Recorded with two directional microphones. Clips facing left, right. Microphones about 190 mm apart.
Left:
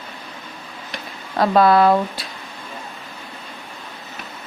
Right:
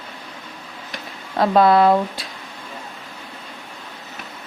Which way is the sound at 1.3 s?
25° right (ahead or behind).